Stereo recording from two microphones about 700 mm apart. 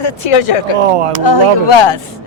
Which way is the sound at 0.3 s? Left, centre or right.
Left.